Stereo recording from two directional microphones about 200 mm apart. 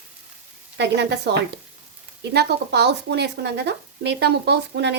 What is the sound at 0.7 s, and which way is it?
Speech, 60° right (ahead or behind).